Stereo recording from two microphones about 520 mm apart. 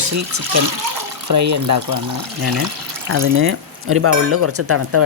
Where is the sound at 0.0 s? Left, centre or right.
Right.